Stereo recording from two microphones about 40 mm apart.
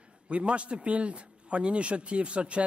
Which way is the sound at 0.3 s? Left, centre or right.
Right.